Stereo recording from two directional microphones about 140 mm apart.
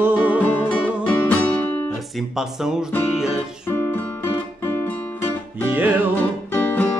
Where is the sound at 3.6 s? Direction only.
15° left (ahead or behind).